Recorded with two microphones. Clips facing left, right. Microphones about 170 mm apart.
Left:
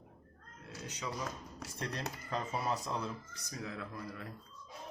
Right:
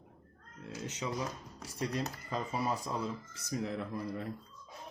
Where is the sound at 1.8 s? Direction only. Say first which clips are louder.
Right 5 dB; 10° right (ahead or behind).